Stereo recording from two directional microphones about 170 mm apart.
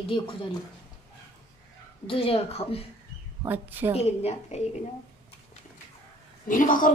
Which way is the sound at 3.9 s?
35° left (ahead or behind).